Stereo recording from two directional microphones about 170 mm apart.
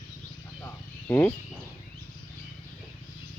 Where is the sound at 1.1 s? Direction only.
10° left (ahead or behind).